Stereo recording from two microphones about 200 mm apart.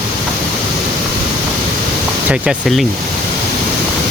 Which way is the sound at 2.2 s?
5° right (ahead or behind).